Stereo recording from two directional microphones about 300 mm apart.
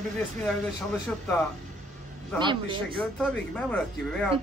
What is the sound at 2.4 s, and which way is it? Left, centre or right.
Speech, centre.